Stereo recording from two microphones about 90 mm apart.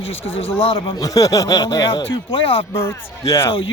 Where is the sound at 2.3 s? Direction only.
90° left.